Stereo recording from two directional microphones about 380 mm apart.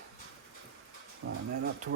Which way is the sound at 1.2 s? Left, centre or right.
Right.